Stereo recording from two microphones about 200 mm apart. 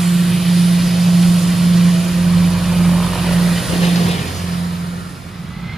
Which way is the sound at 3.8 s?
35° left (ahead or behind).